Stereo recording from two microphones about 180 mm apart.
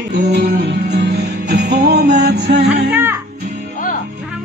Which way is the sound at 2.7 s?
10° right (ahead or behind).